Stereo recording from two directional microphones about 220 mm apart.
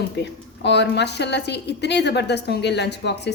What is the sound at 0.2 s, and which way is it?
A woman's voice, 50° left (ahead or behind).